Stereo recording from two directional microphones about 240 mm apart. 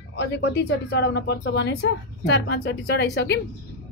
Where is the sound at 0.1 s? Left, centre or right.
Left.